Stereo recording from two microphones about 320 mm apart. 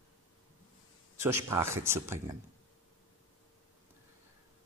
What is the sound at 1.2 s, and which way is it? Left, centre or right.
A man's voice, centre.